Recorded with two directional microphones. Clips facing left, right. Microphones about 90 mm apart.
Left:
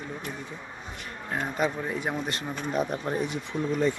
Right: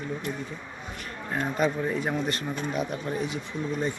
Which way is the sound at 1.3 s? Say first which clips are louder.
Right 2 dB; 15° left (ahead or behind).